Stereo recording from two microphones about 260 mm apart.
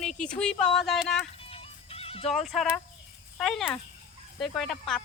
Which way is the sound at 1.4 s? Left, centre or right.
Left.